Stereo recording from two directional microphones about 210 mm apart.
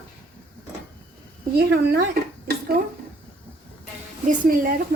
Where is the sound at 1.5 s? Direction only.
50° right (ahead or behind).